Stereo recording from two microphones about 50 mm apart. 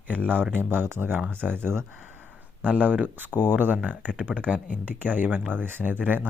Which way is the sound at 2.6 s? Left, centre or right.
Right.